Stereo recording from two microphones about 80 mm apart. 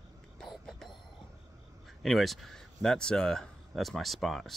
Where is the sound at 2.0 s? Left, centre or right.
Centre.